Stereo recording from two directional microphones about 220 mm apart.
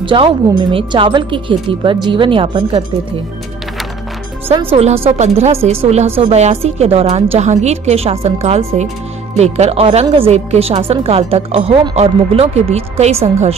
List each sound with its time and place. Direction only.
0.0 s a woman's voice: 20° right (ahead or behind)
4.5 s a woman's voice: 25° right (ahead or behind)